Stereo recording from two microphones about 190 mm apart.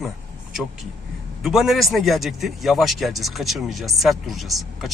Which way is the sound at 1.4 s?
Centre (ahead or behind).